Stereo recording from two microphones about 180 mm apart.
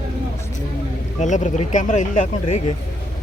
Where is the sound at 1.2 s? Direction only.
40° left (ahead or behind).